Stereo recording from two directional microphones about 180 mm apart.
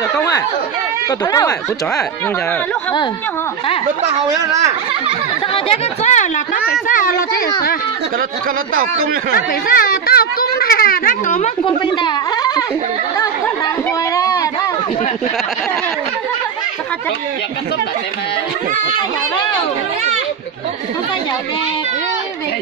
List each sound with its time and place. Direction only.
1.2 s speech: 20° left (ahead or behind)
5.5 s a woman's voice: 35° left (ahead or behind); by 7.4 s 55° left (ahead or behind)
9.7 s a child's voice: 55° left (ahead or behind); by 11.7 s 40° left (ahead or behind)
11.8 s speech: 25° left (ahead or behind)
14.1 s a sound: 20° left (ahead or behind)